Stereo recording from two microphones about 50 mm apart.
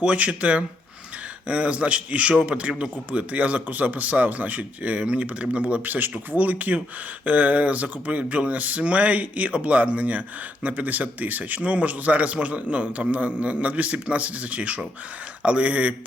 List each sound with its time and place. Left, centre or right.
0.0 s speech: right